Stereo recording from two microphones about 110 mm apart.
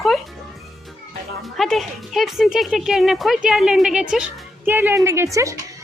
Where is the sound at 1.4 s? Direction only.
Centre (ahead or behind).